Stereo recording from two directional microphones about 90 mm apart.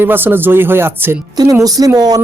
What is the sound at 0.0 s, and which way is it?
Speech, 25° right (ahead or behind).